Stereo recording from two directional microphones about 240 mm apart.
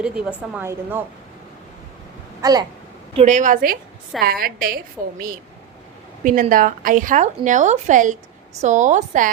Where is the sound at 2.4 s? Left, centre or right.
Centre.